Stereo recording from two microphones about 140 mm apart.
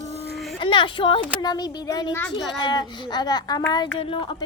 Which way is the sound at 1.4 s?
30° left (ahead or behind).